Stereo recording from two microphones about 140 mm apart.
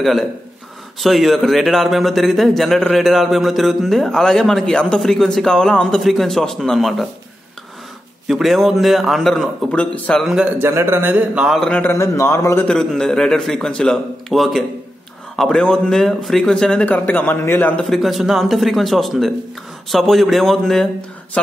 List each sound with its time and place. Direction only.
0.0 s a man's voice: centre (ahead or behind)
8.3 s a man's voice: centre (ahead or behind)
10.2 s a man's voice: 5° right (ahead or behind)
10.6 s speech: 20° right (ahead or behind); by 11.7 s centre (ahead or behind)
11.7 s a man's voice: 15° left (ahead or behind)
12.6 s a man's voice: 5° left (ahead or behind)